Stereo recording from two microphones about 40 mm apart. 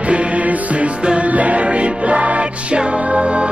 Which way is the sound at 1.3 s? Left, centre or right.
Right.